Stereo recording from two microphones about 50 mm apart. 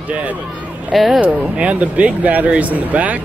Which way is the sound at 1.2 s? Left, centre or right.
Right.